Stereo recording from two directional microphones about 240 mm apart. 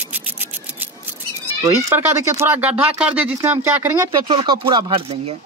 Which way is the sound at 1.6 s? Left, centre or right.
Centre.